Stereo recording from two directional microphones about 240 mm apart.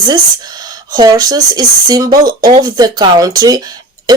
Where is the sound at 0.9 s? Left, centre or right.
Centre.